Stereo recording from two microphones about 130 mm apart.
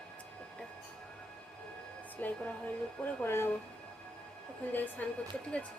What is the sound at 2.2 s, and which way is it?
Speech, 15° left (ahead or behind).